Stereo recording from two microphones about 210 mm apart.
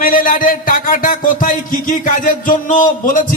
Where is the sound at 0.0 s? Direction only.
40° left (ahead or behind).